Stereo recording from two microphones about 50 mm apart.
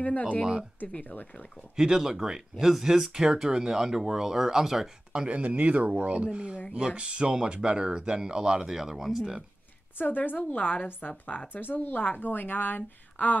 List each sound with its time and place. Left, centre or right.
0.0 s a woman's voice: left
1.8 s speech: centre
9.9 s a woman's voice: left